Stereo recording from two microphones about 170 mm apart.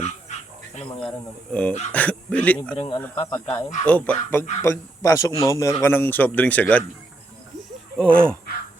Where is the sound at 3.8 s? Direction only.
10° left (ahead or behind).